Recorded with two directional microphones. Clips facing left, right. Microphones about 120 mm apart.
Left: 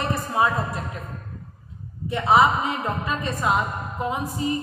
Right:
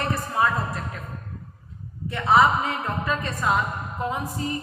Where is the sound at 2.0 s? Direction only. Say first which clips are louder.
Left 1 dB; 15° left (ahead or behind).